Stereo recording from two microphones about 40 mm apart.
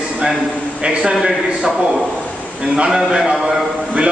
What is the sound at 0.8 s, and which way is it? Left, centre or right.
Speech, right.